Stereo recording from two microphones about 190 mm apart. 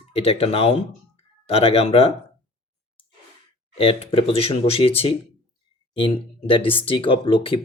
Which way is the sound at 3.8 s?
30° left (ahead or behind).